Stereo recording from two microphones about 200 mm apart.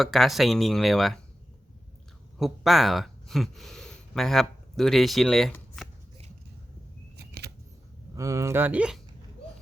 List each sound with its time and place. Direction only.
0.0 s speech: centre (ahead or behind)
2.4 s speech: centre (ahead or behind)
7.2 s scissors: 55° right (ahead or behind)
8.1 s speech: 15° right (ahead or behind)